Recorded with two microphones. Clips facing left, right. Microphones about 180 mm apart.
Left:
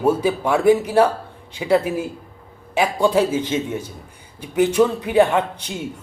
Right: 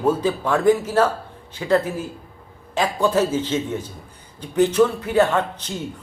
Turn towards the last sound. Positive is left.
turn(degrees=15)  # may be behind; listen again after turning